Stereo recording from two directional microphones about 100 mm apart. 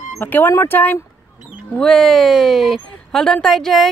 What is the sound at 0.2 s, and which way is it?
Speech, 20° left (ahead or behind).